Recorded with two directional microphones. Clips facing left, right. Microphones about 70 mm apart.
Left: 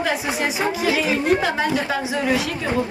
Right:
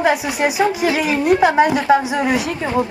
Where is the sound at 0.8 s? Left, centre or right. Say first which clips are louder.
Right 1 dB; right.